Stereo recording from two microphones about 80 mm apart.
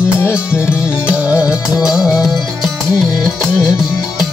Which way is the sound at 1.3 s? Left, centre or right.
Left.